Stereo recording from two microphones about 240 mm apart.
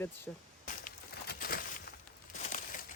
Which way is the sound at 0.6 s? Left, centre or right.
Left.